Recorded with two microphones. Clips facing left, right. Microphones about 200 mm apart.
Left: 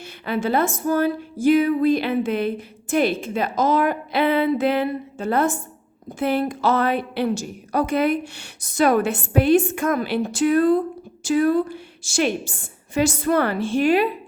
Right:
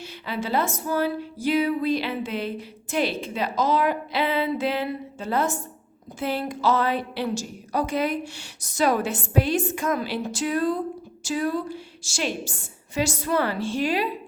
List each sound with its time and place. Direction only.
0.0 s music: 55° left (ahead or behind)
6.1 s a woman's voice: 55° left (ahead or behind)